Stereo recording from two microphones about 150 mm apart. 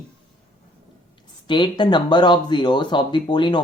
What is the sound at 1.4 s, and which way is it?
Speech, 30° left (ahead or behind).